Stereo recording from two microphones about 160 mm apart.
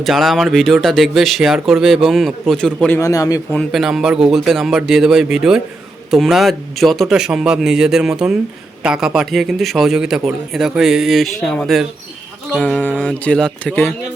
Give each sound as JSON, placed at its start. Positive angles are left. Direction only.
{"t": 0.0, "sound": "a man's voice", "side_deg": 0}
{"t": 3.0, "sound": "a man's voice", "side_deg": 20}
{"t": 3.5, "sound": "a man's voice", "side_deg": 0}
{"t": 12.5, "sound": "music", "side_deg": 5}